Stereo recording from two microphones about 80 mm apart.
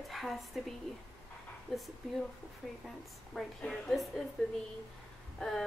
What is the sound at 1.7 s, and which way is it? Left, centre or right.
Speech, centre.